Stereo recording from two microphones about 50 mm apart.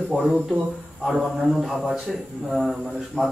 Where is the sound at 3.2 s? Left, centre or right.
Centre.